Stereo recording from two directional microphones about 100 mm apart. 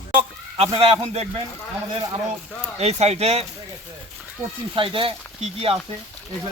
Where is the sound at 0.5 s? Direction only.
80° right.